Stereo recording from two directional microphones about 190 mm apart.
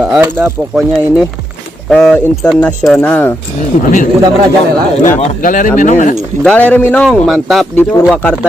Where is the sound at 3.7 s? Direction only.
40° left (ahead or behind).